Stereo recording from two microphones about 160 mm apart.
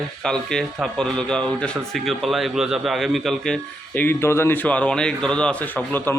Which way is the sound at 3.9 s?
10° left (ahead or behind).